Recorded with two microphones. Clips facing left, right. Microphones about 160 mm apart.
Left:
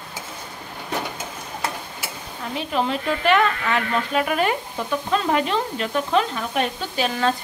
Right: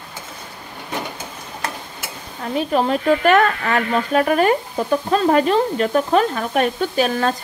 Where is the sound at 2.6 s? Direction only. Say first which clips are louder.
Right 5 dB; 45° right (ahead or behind).